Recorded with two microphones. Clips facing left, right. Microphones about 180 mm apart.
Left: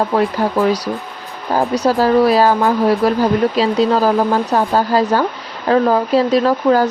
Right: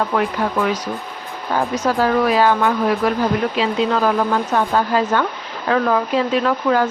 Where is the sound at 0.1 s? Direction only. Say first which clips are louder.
Left 4 dB; 35° left (ahead or behind).